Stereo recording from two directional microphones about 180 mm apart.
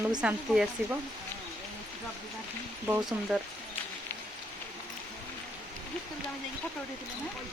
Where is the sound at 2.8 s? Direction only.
5° right (ahead or behind).